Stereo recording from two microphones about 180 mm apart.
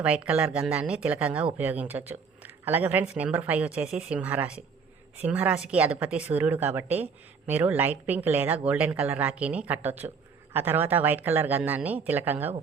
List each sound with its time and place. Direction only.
0.0 s a woman's voice: 5° right (ahead or behind)